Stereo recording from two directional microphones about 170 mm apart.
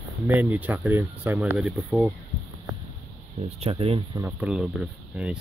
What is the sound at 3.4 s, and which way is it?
Speech, 35° right (ahead or behind).